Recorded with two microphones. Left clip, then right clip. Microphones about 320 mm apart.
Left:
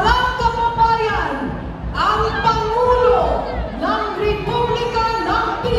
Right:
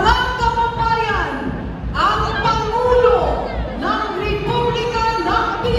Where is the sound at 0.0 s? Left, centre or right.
Centre.